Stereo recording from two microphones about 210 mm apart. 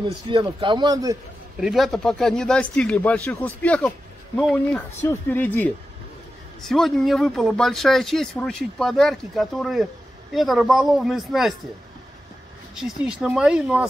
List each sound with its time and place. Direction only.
0.0 s speech: 25° right (ahead or behind)
1.6 s speech: centre (ahead or behind)
12.7 s speech: centre (ahead or behind)